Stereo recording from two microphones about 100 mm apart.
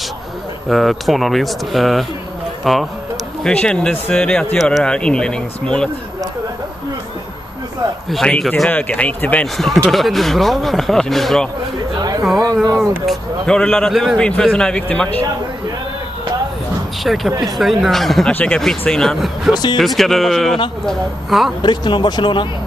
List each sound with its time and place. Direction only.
0.7 s a man's voice: centre (ahead or behind)
8.1 s a man's voice: 5° left (ahead or behind)
9.8 s speech: centre (ahead or behind)
12.0 s a sound: 40° right (ahead or behind)
12.7 s speech: centre (ahead or behind)
13.5 s a man's voice: 10° left (ahead or behind)
17.0 s speech: centre (ahead or behind)
18.3 s speech: 10° left (ahead or behind)
19.5 s speech: 45° left (ahead or behind)
19.8 s speech: centre (ahead or behind)
21.6 s speech: 50° left (ahead or behind)